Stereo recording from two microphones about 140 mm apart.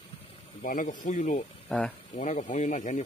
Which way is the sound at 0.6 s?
65° left (ahead or behind).